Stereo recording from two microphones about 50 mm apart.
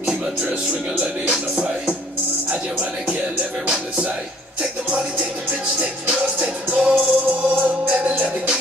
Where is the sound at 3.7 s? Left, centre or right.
Right.